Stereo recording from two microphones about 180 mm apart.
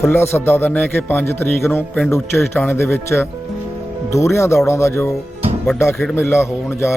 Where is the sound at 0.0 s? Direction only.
15° left (ahead or behind).